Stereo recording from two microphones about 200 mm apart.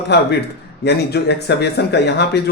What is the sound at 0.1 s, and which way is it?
Speech, 55° left (ahead or behind).